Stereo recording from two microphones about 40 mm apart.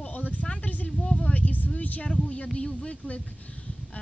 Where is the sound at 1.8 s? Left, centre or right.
Left.